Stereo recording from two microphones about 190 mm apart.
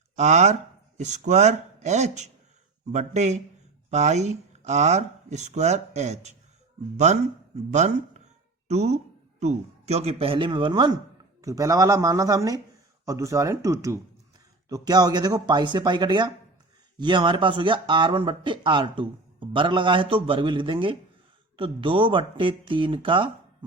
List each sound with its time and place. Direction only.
0.2 s speech: 40° right (ahead or behind)